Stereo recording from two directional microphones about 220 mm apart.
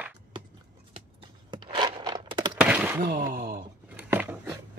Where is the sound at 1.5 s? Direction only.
20° right (ahead or behind).